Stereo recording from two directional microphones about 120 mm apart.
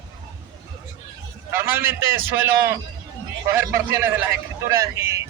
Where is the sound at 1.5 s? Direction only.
20° right (ahead or behind).